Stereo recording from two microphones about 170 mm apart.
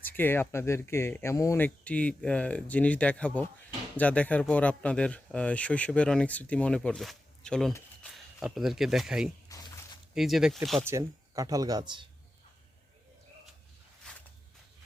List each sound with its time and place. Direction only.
0.0 s speech: 10° left (ahead or behind); by 9.3 s 5° right (ahead or behind)
9.5 s a sound: 20° left (ahead or behind)
10.2 s speech: centre (ahead or behind)
10.8 s speech: 20° right (ahead or behind)
14.0 s walk: 5° left (ahead or behind)